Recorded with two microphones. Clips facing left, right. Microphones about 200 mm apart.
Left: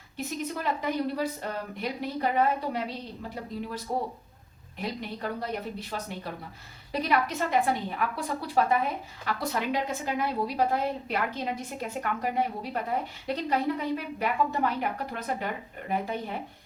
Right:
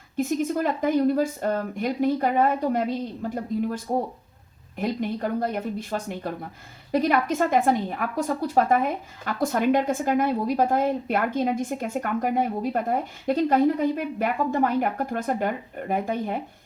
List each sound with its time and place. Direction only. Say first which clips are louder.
0.2 s a woman's voice: right 9 dB; 45° right (ahead or behind)